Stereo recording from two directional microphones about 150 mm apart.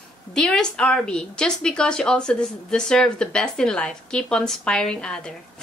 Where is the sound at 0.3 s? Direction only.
5° left (ahead or behind).